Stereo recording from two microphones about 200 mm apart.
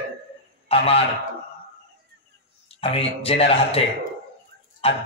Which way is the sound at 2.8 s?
30° left (ahead or behind).